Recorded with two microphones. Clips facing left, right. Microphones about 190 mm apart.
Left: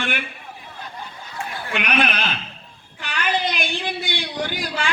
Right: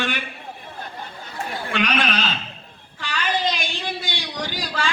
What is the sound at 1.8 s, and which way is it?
A woman's voice, 55° left (ahead or behind).